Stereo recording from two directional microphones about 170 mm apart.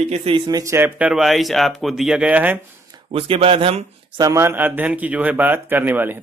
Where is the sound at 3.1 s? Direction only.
35° right (ahead or behind).